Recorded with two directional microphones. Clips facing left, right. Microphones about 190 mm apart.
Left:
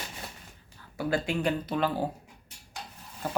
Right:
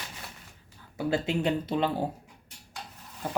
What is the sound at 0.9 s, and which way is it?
Speech, 25° right (ahead or behind).